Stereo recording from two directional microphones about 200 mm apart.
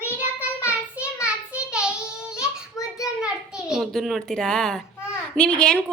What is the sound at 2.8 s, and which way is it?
Child singing, 15° left (ahead or behind).